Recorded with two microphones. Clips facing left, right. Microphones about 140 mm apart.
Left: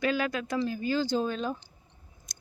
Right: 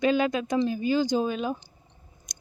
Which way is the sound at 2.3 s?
20° right (ahead or behind).